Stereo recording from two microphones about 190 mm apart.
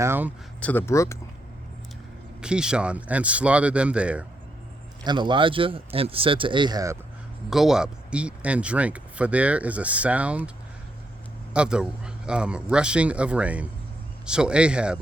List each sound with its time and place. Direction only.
0.0 s speech: 10° right (ahead or behind)
0.6 s speech: 10° left (ahead or behind)
2.4 s speech: 5° right (ahead or behind)
5.0 s speech: 25° right (ahead or behind)
7.5 s speech: centre (ahead or behind)
11.5 s speech: 5° right (ahead or behind)